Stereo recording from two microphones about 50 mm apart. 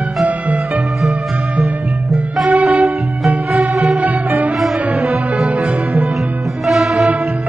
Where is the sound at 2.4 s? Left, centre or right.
Right.